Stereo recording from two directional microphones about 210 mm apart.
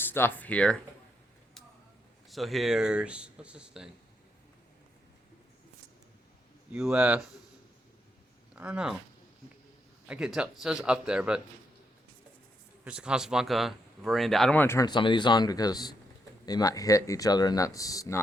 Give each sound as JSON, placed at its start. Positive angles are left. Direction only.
{"t": 0.0, "sound": "speech", "side_deg": 10}
{"t": 2.3, "sound": "speech", "side_deg": 0}
{"t": 6.7, "sound": "speech", "side_deg": -5}
{"t": 8.5, "sound": "speech", "side_deg": -5}
{"t": 10.1, "sound": "speech", "side_deg": -5}
{"t": 12.8, "sound": "speech", "side_deg": -5}